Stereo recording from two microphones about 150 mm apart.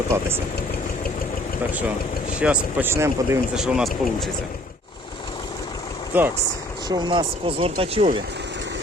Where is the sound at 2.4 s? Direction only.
10° right (ahead or behind).